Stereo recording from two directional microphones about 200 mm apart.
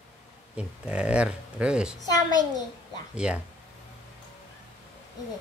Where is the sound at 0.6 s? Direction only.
5° right (ahead or behind).